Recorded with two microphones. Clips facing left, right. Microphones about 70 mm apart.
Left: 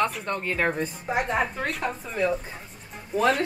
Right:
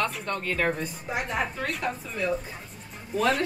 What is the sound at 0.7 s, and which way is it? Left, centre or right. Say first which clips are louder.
Speech: left 4 dB; left.